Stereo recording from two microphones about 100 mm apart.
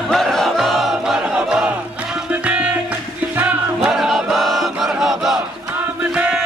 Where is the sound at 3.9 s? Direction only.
Centre (ahead or behind).